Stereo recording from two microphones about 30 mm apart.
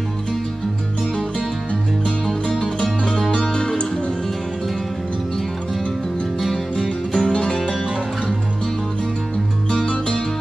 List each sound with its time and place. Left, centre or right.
2.2 s music: centre
3.5 s music: left
6.4 s music: centre
9.7 s music: left